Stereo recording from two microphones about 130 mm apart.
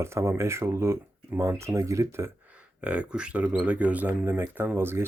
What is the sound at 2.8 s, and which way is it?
Speech, 10° right (ahead or behind).